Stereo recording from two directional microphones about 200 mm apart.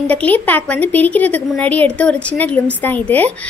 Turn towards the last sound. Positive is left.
turn(degrees=10)  # may be behind; listen again after turning